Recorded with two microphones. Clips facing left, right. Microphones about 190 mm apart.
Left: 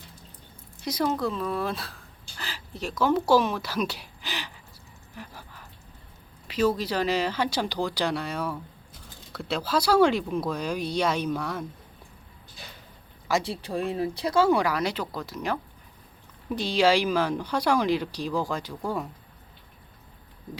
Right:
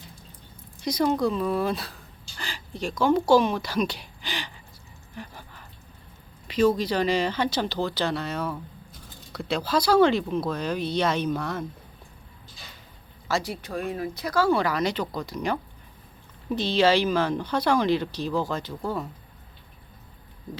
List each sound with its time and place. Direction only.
0.8 s a woman's voice: 5° left (ahead or behind)
5.1 s a sound: 5° left (ahead or behind)
6.5 s speech: 5° left (ahead or behind)
13.4 s speech: 30° left (ahead or behind)
14.6 s speech: 10° left (ahead or behind)
16.6 s speech: 10° left (ahead or behind)